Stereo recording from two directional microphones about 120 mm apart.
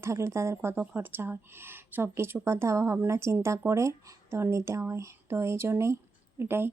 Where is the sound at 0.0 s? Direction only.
25° right (ahead or behind).